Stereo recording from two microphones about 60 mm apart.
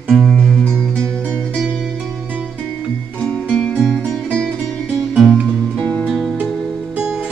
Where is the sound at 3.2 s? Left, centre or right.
Centre.